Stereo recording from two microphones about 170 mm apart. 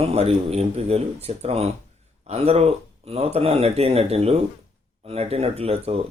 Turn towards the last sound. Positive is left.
turn(degrees=-35)  # may be behind; listen again after turning